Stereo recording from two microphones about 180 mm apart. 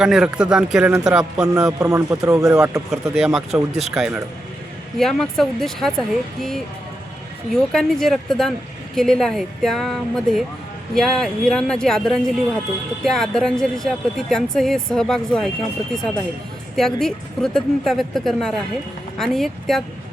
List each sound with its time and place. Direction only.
0.0 s speech: 5° right (ahead or behind)
1.5 s speech: 20° right (ahead or behind)
2.7 s speech: 5° right (ahead or behind)
16.7 s speech: centre (ahead or behind)